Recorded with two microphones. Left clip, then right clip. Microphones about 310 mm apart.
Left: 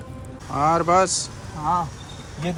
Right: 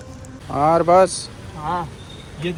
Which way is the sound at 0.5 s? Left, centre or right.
Centre.